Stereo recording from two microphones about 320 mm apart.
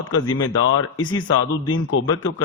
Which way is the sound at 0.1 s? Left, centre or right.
Left.